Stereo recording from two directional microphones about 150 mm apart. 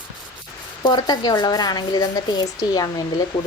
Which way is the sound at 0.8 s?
30° left (ahead or behind).